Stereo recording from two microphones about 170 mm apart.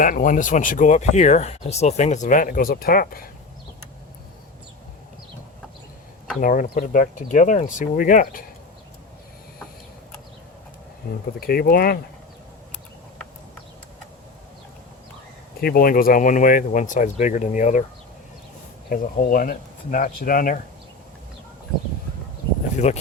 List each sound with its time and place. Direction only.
0.0 s speech: 55° left (ahead or behind)
6.4 s speech: 50° left (ahead or behind)
11.3 s speech: 60° left (ahead or behind)
15.6 s speech: 55° left (ahead or behind)
18.9 s speech: 55° left (ahead or behind)
22.8 s speech: 40° left (ahead or behind)